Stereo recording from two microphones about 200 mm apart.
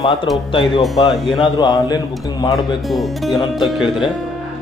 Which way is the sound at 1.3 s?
20° left (ahead or behind).